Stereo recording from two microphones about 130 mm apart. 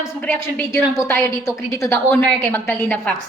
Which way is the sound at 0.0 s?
20° left (ahead or behind).